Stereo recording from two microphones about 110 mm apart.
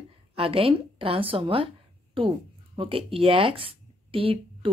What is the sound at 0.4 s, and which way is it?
Speech, 60° right (ahead or behind).